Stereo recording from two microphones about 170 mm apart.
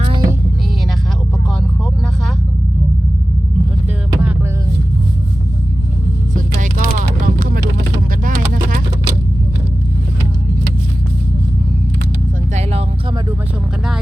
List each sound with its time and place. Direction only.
0.0 s music: 30° right (ahead or behind)
6.3 s vehicle: 50° right (ahead or behind)